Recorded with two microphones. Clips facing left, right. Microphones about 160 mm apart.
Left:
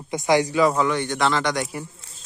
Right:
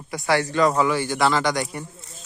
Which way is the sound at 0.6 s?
Centre (ahead or behind).